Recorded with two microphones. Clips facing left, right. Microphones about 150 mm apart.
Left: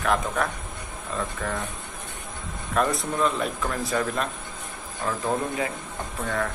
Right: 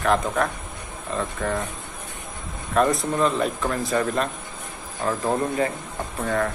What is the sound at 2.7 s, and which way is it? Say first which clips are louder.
Speech: right 4 dB; centre (ahead or behind).